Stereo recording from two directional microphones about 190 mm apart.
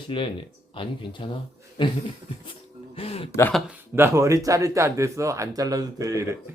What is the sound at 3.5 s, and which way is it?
Speech, 10° right (ahead or behind).